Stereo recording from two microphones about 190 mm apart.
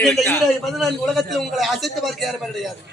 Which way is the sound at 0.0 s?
Centre (ahead or behind).